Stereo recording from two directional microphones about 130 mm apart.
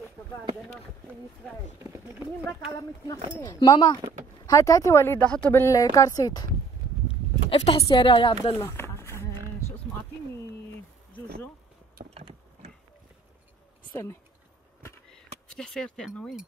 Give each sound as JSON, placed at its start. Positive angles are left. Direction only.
{"t": 1.8, "sound": "speech", "side_deg": -20}
{"t": 3.5, "sound": "a woman's voice", "side_deg": 35}
{"t": 5.2, "sound": "speech", "side_deg": 10}
{"t": 7.4, "sound": "a woman's voice", "side_deg": 50}
{"t": 8.5, "sound": "a sound", "side_deg": 20}
{"t": 12.0, "sound": "vehicle", "side_deg": -90}
{"t": 15.5, "sound": "speech", "side_deg": 5}